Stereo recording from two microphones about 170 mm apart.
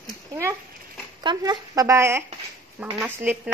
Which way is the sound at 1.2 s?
25° right (ahead or behind).